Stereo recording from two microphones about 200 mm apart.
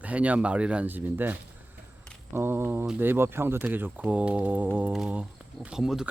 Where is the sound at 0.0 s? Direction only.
5° right (ahead or behind).